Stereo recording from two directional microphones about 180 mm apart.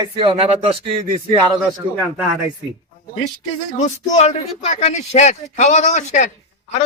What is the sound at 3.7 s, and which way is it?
Speech, 40° left (ahead or behind).